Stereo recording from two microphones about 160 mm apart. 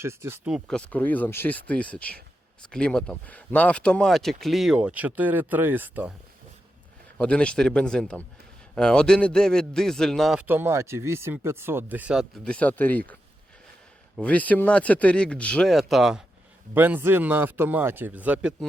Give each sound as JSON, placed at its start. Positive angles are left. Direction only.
{"t": 0.0, "sound": "speech", "side_deg": -15}
{"t": 0.5, "sound": "speech", "side_deg": 5}
{"t": 7.2, "sound": "speech", "side_deg": 5}
{"t": 10.4, "sound": "speech", "side_deg": -15}
{"t": 14.2, "sound": "speech", "side_deg": 10}
{"t": 16.7, "sound": "speech", "side_deg": -10}